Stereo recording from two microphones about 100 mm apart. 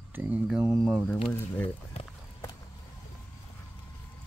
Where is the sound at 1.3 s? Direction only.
20° left (ahead or behind).